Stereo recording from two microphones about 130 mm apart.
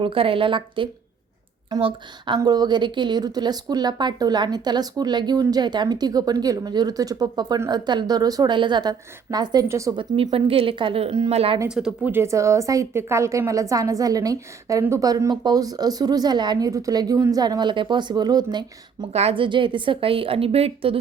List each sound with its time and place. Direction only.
0.0 s a woman's voice: 45° right (ahead or behind); by 9.9 s 25° right (ahead or behind)
9.9 s a woman's voice: 40° right (ahead or behind)
11.7 s speech: 5° right (ahead or behind)
12.1 s a woman's voice: 20° right (ahead or behind)
19.1 s a woman's voice: 50° right (ahead or behind)